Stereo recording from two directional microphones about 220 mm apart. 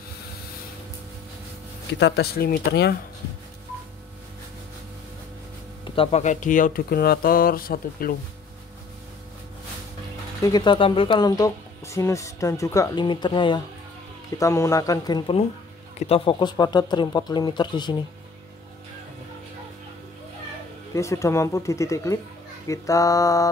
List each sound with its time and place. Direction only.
2.0 s speech: 50° left (ahead or behind)
5.9 s speech: 25° left (ahead or behind)
10.4 s speech: 20° left (ahead or behind)
20.9 s speech: 15° left (ahead or behind)